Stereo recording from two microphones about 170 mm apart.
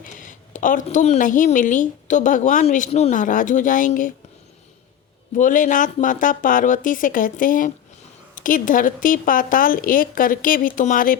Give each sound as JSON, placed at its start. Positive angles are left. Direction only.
{"t": 0.0, "sound": "a woman's voice", "side_deg": 50}
{"t": 5.4, "sound": "a woman's voice", "side_deg": 50}